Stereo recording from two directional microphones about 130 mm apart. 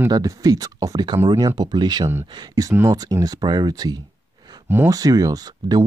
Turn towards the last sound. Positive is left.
turn(degrees=-30)  # may be behind; listen again after turning